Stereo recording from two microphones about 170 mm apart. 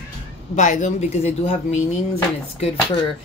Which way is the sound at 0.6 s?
45° left (ahead or behind).